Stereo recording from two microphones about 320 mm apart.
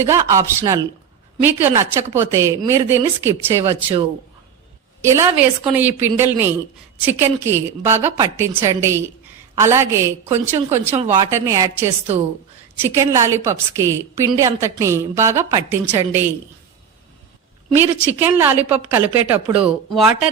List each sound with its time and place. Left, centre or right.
0.0 s a woman's voice: centre
5.0 s a woman's voice: centre
10.9 s speech: centre
11.3 s a woman's voice: centre
17.7 s a woman's voice: centre